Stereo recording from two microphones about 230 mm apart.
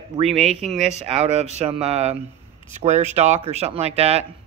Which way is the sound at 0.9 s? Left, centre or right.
Right.